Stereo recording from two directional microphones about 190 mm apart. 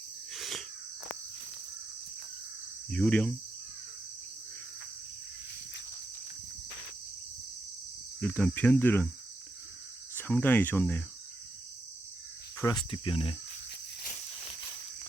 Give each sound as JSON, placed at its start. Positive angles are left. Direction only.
{"t": 0.3, "sound": "cricket", "side_deg": 0}
{"t": 2.9, "sound": "cricket", "side_deg": 5}
{"t": 8.2, "sound": "cricket", "side_deg": 5}
{"t": 10.2, "sound": "cricket", "side_deg": 10}
{"t": 12.5, "sound": "speech", "side_deg": 20}